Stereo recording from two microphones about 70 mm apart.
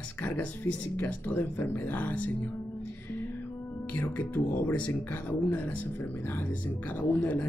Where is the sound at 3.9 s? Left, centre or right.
Left.